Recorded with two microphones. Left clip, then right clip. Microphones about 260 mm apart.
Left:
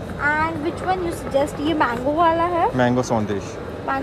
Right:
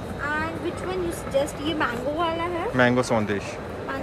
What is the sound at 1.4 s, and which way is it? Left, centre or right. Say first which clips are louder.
Speech: left 5 dB; left.